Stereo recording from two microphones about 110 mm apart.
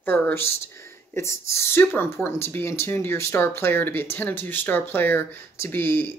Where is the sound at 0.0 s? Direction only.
20° left (ahead or behind).